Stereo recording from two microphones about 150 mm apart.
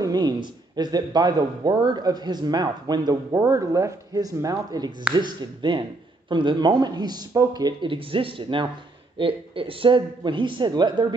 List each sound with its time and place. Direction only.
0.0 s a man's voice: 25° right (ahead or behind)